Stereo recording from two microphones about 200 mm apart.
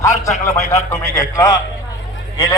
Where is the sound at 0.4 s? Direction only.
15° left (ahead or behind).